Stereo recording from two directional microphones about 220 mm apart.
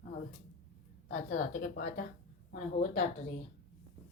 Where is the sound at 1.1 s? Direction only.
35° left (ahead or behind).